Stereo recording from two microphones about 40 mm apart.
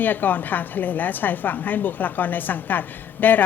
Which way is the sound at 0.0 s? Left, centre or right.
Left.